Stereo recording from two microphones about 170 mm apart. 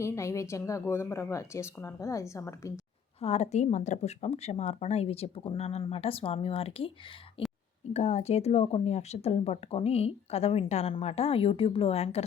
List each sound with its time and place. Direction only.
0.0 s speech: 15° left (ahead or behind)
3.2 s speech: 40° left (ahead or behind)
7.4 s a sound: 35° left (ahead or behind)
7.9 s speech: 40° left (ahead or behind)